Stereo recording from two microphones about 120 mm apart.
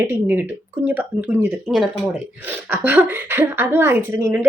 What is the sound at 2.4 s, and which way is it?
A woman's voice, 15° right (ahead or behind).